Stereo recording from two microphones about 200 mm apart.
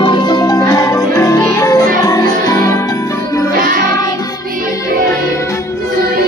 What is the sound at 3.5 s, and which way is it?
Music, 45° right (ahead or behind).